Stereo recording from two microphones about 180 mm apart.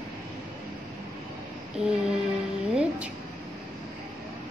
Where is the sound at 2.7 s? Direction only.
5° right (ahead or behind).